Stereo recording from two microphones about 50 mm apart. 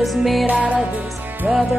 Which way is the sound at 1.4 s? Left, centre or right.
Centre.